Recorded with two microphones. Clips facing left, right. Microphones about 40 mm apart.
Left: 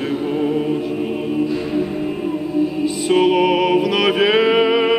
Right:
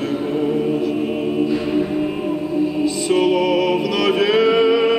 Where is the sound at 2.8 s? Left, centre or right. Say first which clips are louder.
Left 2 dB; centre.